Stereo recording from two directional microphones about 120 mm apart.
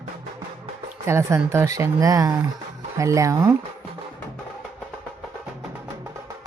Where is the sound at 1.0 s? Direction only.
25° right (ahead or behind).